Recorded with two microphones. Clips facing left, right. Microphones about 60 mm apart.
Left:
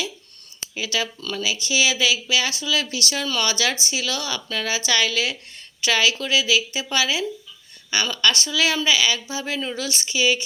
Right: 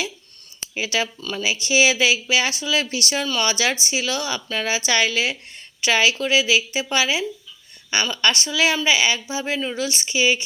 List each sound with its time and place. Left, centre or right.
0.7 s speech: right